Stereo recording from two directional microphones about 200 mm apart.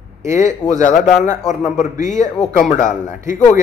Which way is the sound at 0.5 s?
15° right (ahead or behind).